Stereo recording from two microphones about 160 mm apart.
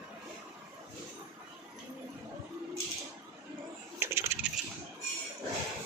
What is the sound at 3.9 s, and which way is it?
Coin, 15° right (ahead or behind).